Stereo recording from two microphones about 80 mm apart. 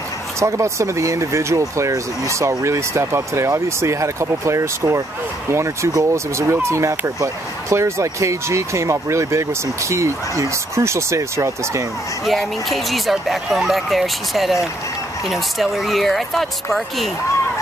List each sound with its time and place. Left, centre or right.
0.4 s speech: right
12.3 s speech: centre